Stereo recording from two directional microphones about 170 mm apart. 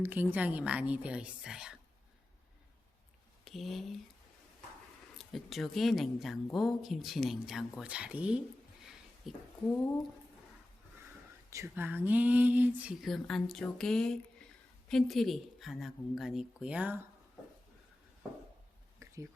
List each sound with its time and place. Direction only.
0.0 s speech: 10° right (ahead or behind)
3.4 s speech: centre (ahead or behind)
5.1 s speech: centre (ahead or behind)
8.8 s a sound: centre (ahead or behind)
11.5 s speech: 15° right (ahead or behind)
19.0 s a sound: 15° right (ahead or behind)